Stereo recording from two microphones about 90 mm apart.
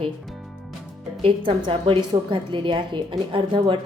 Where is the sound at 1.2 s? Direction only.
80° right.